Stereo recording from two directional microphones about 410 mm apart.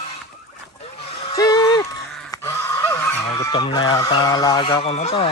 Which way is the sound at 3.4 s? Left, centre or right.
Centre.